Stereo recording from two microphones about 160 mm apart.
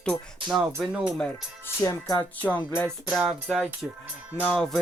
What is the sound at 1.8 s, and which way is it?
Speech, 25° left (ahead or behind).